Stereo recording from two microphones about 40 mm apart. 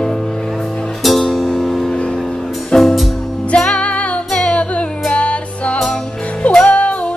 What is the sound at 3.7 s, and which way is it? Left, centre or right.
Music, left.